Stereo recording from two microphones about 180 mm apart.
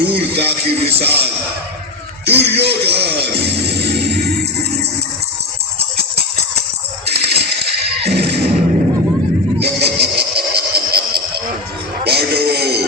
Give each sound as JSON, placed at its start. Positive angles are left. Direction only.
{"t": 0.0, "sound": "speech", "side_deg": -65}
{"t": 7.0, "sound": "music", "side_deg": -65}
{"t": 9.6, "sound": "a sound", "side_deg": -65}
{"t": 12.0, "sound": "music", "side_deg": -60}